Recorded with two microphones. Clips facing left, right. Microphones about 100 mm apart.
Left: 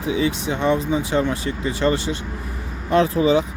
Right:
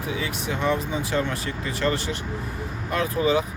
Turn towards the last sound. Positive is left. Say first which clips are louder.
# left 6 dB
turn(degrees=25)  # may be behind; listen again after turning